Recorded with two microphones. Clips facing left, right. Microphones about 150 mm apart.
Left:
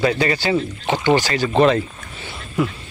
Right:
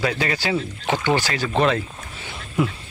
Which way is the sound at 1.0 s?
10° left (ahead or behind).